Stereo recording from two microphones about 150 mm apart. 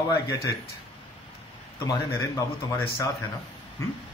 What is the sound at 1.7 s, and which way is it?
A man's voice, 20° left (ahead or behind).